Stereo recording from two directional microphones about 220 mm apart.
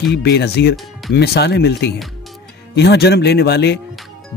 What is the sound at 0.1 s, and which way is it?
Speech, 50° left (ahead or behind).